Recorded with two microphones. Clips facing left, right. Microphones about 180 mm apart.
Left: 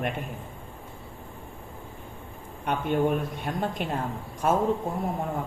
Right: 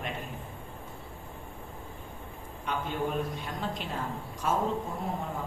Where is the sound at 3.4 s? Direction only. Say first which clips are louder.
Left 6 dB; 55° left (ahead or behind).